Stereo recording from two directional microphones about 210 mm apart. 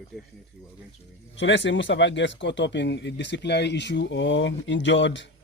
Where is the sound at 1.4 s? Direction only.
60° left (ahead or behind).